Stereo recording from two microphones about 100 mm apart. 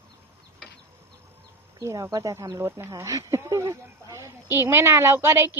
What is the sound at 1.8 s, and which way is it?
A woman's voice, 30° right (ahead or behind).